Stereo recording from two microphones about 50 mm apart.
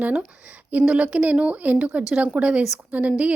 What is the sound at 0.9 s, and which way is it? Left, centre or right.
Speech, right.